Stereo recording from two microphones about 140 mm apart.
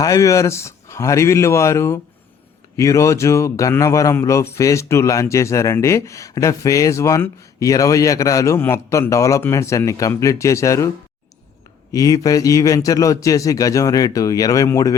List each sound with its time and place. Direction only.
0.0 s a man's voice: 25° left (ahead or behind)